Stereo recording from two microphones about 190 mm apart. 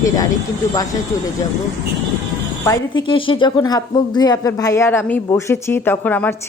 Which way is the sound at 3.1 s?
25° left (ahead or behind).